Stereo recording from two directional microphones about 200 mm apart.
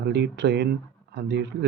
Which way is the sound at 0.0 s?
60° right (ahead or behind).